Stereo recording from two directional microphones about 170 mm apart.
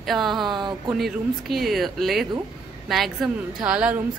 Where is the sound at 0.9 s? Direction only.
Centre (ahead or behind).